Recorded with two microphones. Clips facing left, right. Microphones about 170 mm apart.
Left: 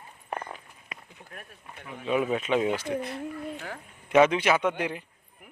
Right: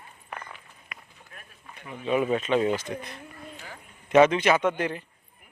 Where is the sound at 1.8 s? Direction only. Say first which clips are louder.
Right 2 dB; centre (ahead or behind).